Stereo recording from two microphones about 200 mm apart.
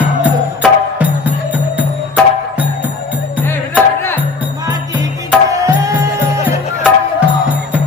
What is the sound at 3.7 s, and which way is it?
Music, 10° left (ahead or behind).